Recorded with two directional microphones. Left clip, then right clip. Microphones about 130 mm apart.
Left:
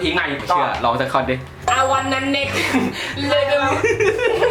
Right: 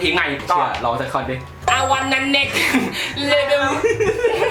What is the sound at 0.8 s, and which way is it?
Speech, 30° left (ahead or behind).